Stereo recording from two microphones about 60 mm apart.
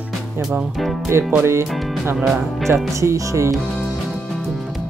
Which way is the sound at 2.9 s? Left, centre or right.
Right.